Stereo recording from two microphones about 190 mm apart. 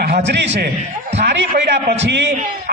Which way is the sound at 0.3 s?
65° right (ahead or behind).